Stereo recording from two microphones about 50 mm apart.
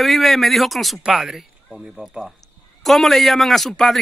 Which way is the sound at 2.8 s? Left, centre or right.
Centre.